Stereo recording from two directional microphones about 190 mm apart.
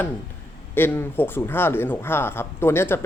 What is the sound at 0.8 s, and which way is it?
Speech, 10° left (ahead or behind).